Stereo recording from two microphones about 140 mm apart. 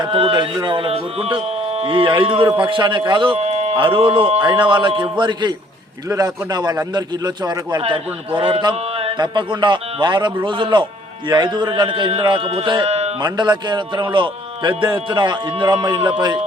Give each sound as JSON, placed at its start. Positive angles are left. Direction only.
{"t": 0.0, "sound": "a man's voice", "side_deg": -40}
{"t": 12.9, "sound": "a sound", "side_deg": -50}
{"t": 13.2, "sound": "speech", "side_deg": -30}